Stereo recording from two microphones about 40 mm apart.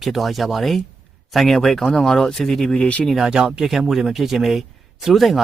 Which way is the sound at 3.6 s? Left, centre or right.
Centre.